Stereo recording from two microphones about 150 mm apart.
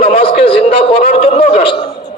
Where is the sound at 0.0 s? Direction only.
40° left (ahead or behind).